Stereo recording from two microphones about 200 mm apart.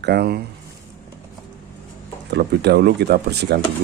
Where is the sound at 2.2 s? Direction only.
55° right (ahead or behind).